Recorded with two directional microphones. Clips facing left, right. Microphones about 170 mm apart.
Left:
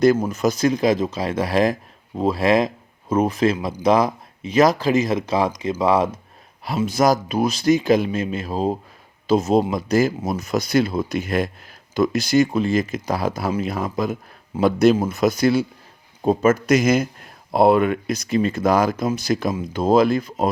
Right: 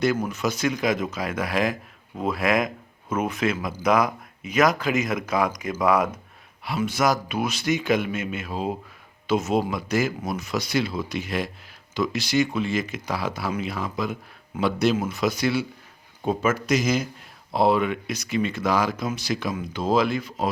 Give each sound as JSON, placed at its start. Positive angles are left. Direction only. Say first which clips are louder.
{"t": 0.3, "sound": "speech", "louder": "left 6 dB", "side_deg": 40}
{"t": 6.8, "sound": "speech", "louder": "left 5 dB", "side_deg": 40}